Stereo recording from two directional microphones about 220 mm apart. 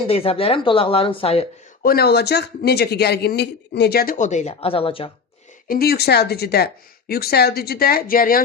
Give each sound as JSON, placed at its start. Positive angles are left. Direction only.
{"t": 0.1, "sound": "speech", "side_deg": 25}
{"t": 1.8, "sound": "a man's voice", "side_deg": 45}
{"t": 5.6, "sound": "a man's voice", "side_deg": 45}